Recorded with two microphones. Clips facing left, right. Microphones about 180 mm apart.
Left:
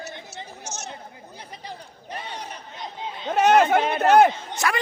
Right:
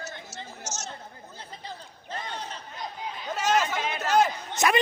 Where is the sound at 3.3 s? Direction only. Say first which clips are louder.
Left 9 dB; 60° left (ahead or behind).